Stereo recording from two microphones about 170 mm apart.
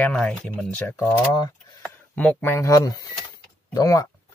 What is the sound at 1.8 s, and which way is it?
Speech, 10° left (ahead or behind).